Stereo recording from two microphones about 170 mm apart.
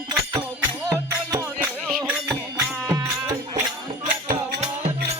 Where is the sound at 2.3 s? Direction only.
20° right (ahead or behind).